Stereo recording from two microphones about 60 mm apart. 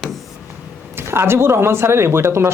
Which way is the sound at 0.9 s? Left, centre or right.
Right.